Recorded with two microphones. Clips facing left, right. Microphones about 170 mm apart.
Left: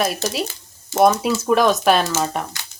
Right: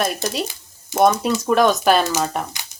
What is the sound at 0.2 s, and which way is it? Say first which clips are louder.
Speech: even; 10° right (ahead or behind).